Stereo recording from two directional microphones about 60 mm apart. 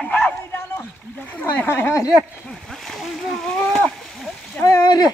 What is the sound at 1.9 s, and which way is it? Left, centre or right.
Speech, left.